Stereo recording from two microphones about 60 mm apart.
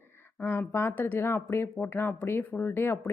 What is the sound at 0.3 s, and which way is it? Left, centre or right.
A woman's voice, left.